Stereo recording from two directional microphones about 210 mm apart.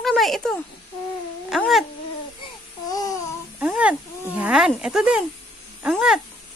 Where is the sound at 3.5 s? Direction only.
5° right (ahead or behind).